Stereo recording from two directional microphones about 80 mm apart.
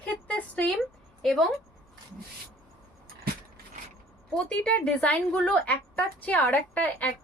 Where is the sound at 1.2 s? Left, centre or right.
Centre.